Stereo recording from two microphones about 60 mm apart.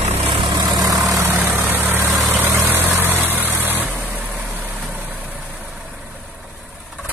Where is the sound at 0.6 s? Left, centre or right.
Right.